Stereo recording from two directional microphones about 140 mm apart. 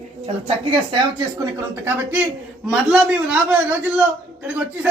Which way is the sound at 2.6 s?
5° right (ahead or behind).